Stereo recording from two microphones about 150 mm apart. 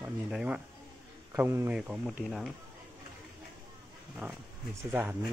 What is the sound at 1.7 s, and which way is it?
Speech, 5° right (ahead or behind).